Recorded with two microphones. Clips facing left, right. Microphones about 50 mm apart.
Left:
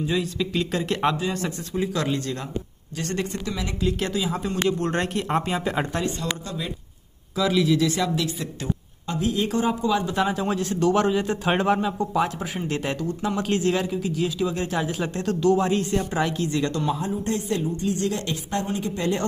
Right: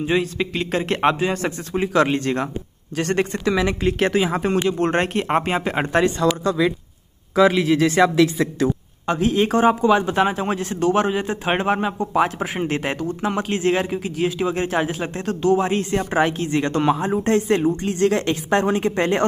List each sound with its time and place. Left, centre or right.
0.0 s a man's voice: right
1.1 s a man's voice: right
5.9 s speech: right
7.5 s a man's voice: right
10.6 s a man's voice: centre
12.1 s a man's voice: right
13.4 s a man's voice: right
13.8 s a man's voice: right
14.9 s a man's voice: right
15.7 s a man's voice: right
17.1 s a woman's voice: right